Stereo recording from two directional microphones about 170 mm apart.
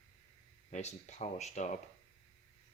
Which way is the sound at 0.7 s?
40° left (ahead or behind).